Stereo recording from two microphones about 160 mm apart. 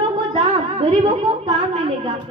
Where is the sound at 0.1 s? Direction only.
35° right (ahead or behind).